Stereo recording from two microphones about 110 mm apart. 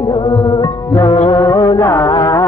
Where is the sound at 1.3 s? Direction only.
45° left (ahead or behind).